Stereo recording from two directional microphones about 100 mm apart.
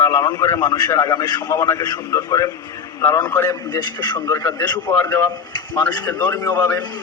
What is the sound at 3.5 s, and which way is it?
Speech, 40° left (ahead or behind).